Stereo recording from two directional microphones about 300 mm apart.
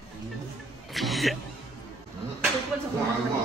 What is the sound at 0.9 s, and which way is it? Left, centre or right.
Music, centre.